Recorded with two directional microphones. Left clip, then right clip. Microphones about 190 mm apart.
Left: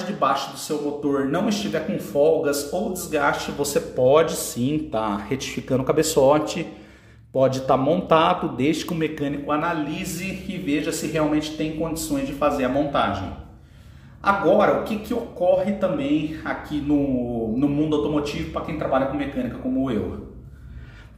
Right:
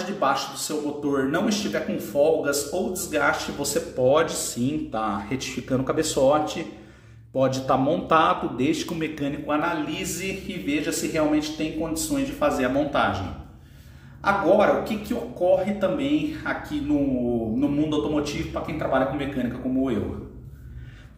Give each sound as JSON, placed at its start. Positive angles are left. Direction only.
{"t": 0.2, "sound": "speech", "side_deg": 10}
{"t": 14.2, "sound": "speech", "side_deg": 20}
{"t": 18.9, "sound": "a man's voice", "side_deg": 0}